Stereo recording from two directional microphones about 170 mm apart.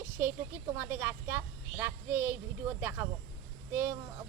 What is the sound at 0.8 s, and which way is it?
Speech, 15° right (ahead or behind).